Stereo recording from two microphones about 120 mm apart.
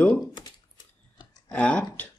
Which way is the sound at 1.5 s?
10° left (ahead or behind).